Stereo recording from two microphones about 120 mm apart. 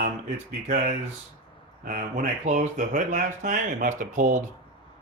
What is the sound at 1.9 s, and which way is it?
Speech, 90° right.